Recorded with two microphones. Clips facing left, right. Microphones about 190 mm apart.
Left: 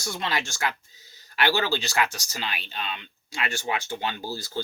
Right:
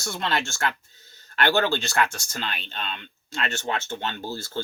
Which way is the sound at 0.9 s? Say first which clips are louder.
Right 1 dB; 60° right (ahead or behind).